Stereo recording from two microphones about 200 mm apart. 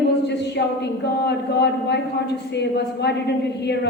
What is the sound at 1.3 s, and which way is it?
A woman's voice, 55° left (ahead or behind).